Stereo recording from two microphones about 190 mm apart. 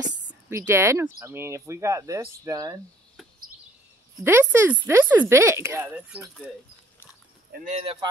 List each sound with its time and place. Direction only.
0.5 s speech: 15° right (ahead or behind)
4.2 s speech: 10° right (ahead or behind)
7.8 s speech: 30° right (ahead or behind)